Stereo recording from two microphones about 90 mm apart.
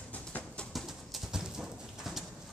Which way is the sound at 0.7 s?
Centre (ahead or behind).